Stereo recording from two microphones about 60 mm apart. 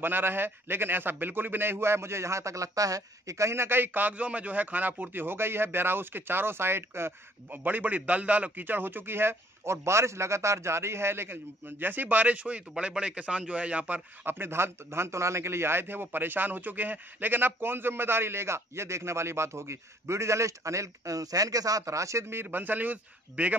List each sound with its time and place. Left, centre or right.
0.0 s a man's voice: right
14.2 s a man's voice: right
22.3 s a man's voice: right